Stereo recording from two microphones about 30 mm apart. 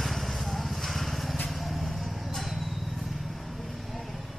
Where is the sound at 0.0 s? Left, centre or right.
Centre.